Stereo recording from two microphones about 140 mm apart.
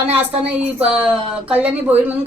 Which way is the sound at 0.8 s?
10° right (ahead or behind).